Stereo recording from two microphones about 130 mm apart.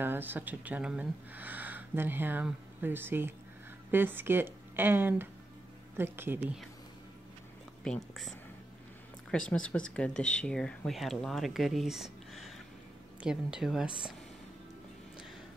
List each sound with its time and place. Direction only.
0.0 s speech: 15° right (ahead or behind)
7.8 s speech: 5° left (ahead or behind)